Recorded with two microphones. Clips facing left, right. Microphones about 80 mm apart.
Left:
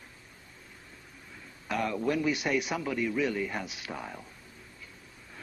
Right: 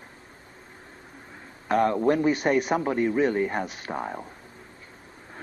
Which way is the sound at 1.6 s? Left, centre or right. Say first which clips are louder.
Right 8 dB; right.